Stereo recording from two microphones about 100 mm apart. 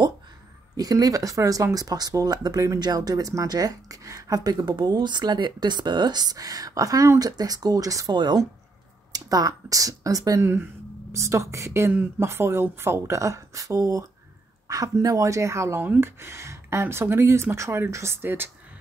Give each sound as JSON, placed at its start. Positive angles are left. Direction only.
{"t": 0.7, "sound": "speech", "side_deg": -40}
{"t": 8.1, "sound": "speech", "side_deg": -50}
{"t": 9.1, "sound": "speech", "side_deg": -40}
{"t": 10.4, "sound": "speech", "side_deg": -25}